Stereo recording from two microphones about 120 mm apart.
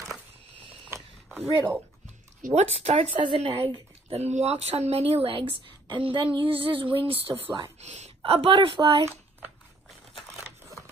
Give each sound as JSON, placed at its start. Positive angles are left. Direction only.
{"t": 0.8, "sound": "a sound", "side_deg": -20}
{"t": 2.4, "sound": "speech", "side_deg": -65}
{"t": 3.2, "sound": "a woman's voice", "side_deg": -45}
{"t": 4.2, "sound": "a woman's voice", "side_deg": -65}
{"t": 7.8, "sound": "a woman's voice", "side_deg": -70}
{"t": 8.2, "sound": "a woman's voice", "side_deg": -50}
{"t": 9.0, "sound": "a sound", "side_deg": -15}